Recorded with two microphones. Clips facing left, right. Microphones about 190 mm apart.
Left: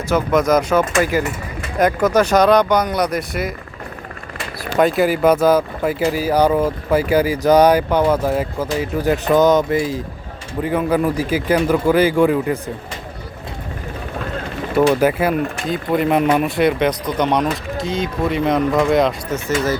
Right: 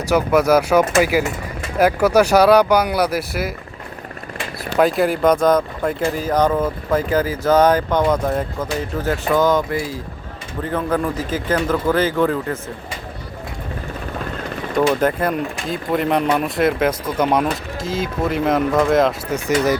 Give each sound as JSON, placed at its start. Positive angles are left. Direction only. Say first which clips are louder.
{"t": 0.1, "sound": "speech", "louder": "right 1 dB", "side_deg": -10}
{"t": 4.8, "sound": "speech", "louder": "left 1 dB", "side_deg": 0}
{"t": 14.8, "sound": "speech", "louder": "left 3 dB", "side_deg": 5}
{"t": 19.3, "sound": "speech", "louder": "right 2 dB", "side_deg": -15}